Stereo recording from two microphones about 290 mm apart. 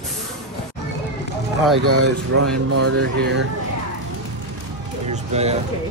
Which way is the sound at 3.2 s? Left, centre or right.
Right.